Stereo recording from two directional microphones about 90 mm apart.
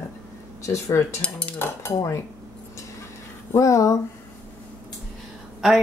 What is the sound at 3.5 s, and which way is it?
Speech, 35° left (ahead or behind).